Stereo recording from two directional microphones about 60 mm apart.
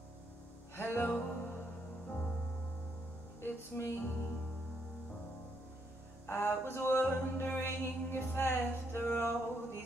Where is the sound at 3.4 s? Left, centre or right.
Left.